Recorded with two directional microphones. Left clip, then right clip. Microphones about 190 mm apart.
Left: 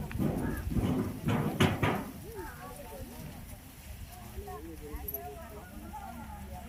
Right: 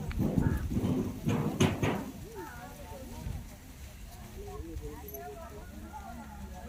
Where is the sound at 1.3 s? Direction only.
30° left (ahead or behind).